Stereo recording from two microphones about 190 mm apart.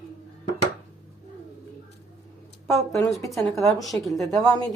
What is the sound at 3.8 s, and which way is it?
Speech, centre (ahead or behind).